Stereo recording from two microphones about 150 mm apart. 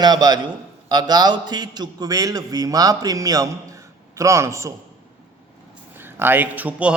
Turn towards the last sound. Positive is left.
turn(degrees=-10)  # may be behind; listen again after turning